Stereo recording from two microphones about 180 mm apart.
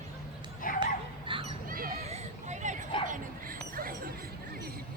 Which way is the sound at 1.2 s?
30° right (ahead or behind).